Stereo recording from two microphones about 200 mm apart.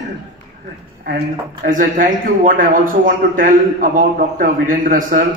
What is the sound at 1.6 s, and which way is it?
A man's voice, 40° right (ahead or behind).